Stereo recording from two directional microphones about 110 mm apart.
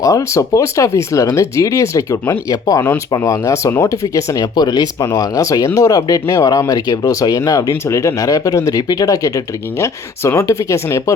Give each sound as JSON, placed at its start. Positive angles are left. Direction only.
{"t": 0.0, "sound": "speech", "side_deg": 30}